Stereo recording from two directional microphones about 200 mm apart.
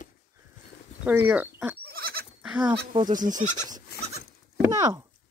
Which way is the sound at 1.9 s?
50° right (ahead or behind).